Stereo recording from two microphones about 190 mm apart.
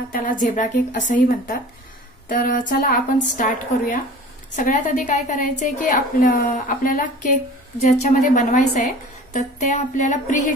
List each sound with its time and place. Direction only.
0.1 s a woman's voice: 40° left (ahead or behind)